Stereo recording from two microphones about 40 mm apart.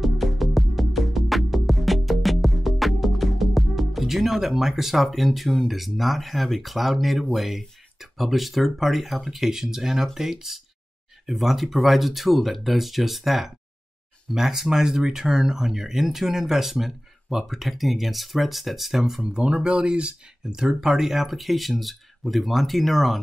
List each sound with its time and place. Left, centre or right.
0.0 s music: centre
7.3 s speech: centre
19.3 s speech: right
20.5 s speech: centre